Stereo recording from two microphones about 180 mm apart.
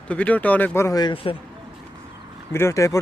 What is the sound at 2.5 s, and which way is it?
Speech, 15° left (ahead or behind).